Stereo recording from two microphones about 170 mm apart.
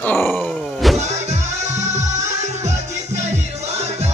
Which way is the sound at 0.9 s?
40° right (ahead or behind).